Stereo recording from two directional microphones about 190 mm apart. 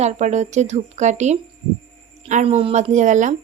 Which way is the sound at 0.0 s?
35° right (ahead or behind).